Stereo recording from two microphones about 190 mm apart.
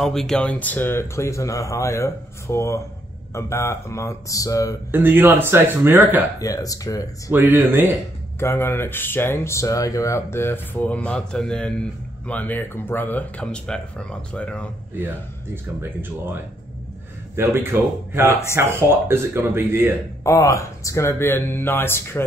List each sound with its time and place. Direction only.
0.0 s speech: centre (ahead or behind); by 4.7 s 15° left (ahead or behind)
4.9 s speech: 10° right (ahead or behind)
6.4 s speech: 20° left (ahead or behind)
7.2 s speech: 10° right (ahead or behind)
8.4 s speech: 15° left (ahead or behind)
15.0 s speech: 10° right (ahead or behind)
17.4 s speech: 15° right (ahead or behind)
20.2 s speech: 15° left (ahead or behind)